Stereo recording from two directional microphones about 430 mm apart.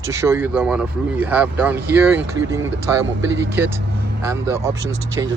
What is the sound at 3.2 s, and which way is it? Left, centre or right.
Speech, right.